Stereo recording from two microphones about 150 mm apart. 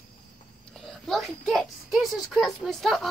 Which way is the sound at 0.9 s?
Centre (ahead or behind).